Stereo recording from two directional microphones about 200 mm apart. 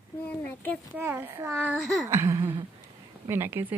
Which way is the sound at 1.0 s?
10° right (ahead or behind).